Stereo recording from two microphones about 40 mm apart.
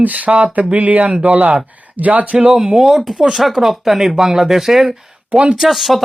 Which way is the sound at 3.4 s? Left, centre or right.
Centre.